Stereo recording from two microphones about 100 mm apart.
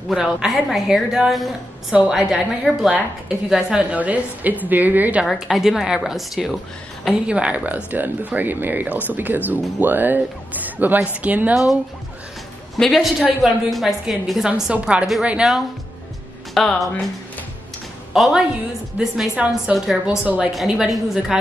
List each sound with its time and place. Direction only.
0.1 s a woman's voice: 5° right (ahead or behind)
5.2 s a woman's voice: centre (ahead or behind)
11.5 s a woman's voice: centre (ahead or behind)
18.1 s a woman's voice: centre (ahead or behind)
19.1 s a woman's voice: 15° right (ahead or behind)